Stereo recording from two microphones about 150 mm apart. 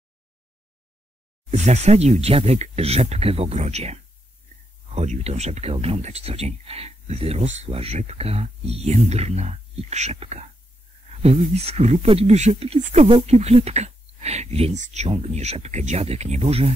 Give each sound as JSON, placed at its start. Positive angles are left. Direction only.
{"t": 1.5, "sound": "speech", "side_deg": -50}